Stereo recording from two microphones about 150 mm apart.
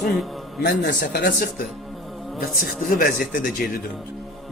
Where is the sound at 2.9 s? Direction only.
70° left (ahead or behind).